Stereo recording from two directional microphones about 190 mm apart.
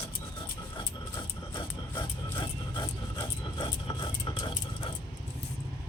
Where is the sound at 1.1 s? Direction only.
25° left (ahead or behind).